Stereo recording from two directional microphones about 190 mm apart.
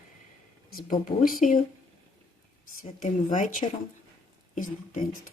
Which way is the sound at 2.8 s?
45° left (ahead or behind).